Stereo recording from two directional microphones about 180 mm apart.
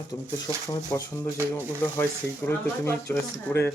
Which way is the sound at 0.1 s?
20° left (ahead or behind).